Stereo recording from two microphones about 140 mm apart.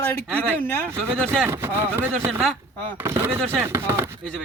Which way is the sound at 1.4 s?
15° right (ahead or behind).